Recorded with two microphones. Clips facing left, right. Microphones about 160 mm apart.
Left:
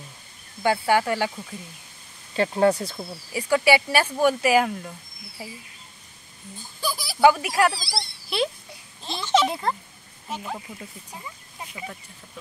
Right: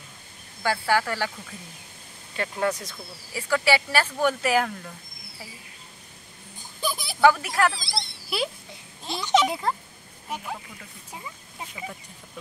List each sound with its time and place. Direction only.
0.6 s speech: 20° left (ahead or behind)
2.3 s speech: 30° left (ahead or behind)
3.3 s speech: 15° left (ahead or behind)
6.8 s a sound: 20° right (ahead or behind)
7.2 s speech: 15° left (ahead or behind)
7.8 s speech: 20° right (ahead or behind)
8.3 s speech: 5° right (ahead or behind)
9.2 s a child's voice: 15° right (ahead or behind)
9.5 s speech: centre (ahead or behind)